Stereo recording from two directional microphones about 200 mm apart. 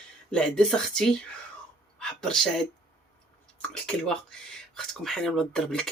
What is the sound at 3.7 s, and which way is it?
Speech, 5° left (ahead or behind).